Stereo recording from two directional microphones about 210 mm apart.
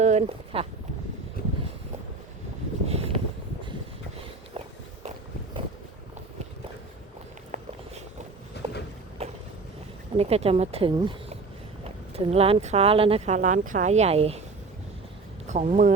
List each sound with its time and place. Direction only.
0.0 s speech: 30° right (ahead or behind)
2.8 s vehicle: 30° right (ahead or behind)
8.6 s walk: 55° left (ahead or behind)
9.2 s boat: 30° right (ahead or behind)
10.2 s speech: 30° right (ahead or behind)
15.4 s speech: 35° right (ahead or behind)